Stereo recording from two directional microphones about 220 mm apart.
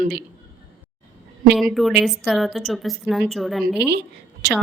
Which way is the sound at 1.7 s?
Centre (ahead or behind).